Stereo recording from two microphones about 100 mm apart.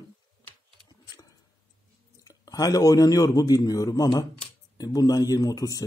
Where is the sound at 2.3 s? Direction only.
35° left (ahead or behind).